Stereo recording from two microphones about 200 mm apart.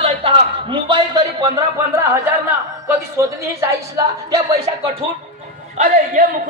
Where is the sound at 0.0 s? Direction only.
25° right (ahead or behind).